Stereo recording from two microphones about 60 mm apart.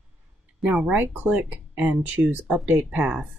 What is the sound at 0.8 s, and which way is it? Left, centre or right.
Speech, right.